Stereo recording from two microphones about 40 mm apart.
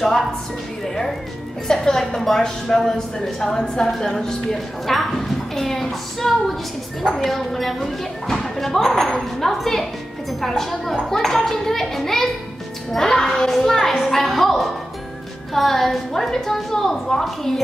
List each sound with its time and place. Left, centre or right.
0.8 s a woman's voice: centre